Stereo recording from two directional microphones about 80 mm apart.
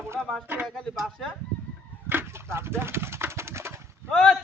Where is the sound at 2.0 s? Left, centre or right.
Right.